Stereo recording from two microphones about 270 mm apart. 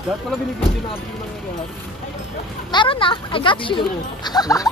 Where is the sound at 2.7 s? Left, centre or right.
Centre.